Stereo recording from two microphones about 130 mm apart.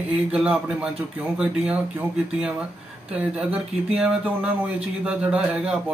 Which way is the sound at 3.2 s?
5° right (ahead or behind).